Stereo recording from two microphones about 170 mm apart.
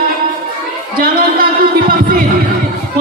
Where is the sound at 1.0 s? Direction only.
60° right (ahead or behind).